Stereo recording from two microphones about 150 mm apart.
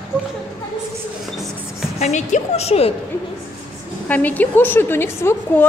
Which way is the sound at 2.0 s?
50° left (ahead or behind).